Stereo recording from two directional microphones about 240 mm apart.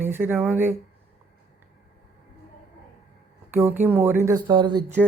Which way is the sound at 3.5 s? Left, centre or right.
Centre.